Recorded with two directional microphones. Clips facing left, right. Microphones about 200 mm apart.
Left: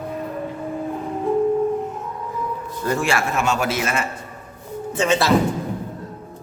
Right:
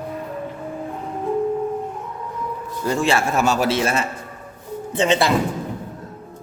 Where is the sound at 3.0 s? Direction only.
30° right (ahead or behind).